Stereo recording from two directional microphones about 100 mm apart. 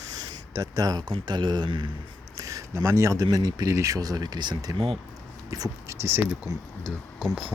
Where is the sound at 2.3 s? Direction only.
35° right (ahead or behind).